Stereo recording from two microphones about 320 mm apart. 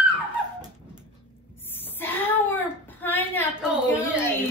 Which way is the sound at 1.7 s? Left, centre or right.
Centre.